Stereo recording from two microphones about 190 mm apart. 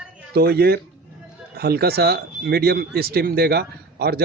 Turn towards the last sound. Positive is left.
turn(degrees=-55)  # may be behind; listen again after turning